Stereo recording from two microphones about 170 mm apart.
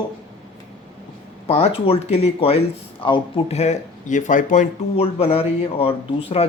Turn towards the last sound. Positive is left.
turn(degrees=35)  # may be behind; listen again after turning